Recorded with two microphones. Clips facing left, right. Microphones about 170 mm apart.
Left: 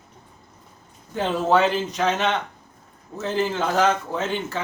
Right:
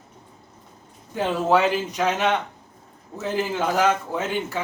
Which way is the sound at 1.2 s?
10° right (ahead or behind).